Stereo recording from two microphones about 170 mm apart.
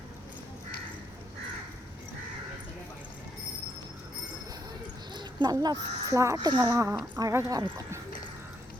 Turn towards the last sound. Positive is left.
turn(degrees=-20)  # may be behind; listen again after turning